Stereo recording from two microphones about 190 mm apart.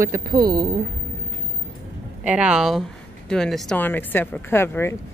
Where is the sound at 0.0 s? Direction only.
20° right (ahead or behind).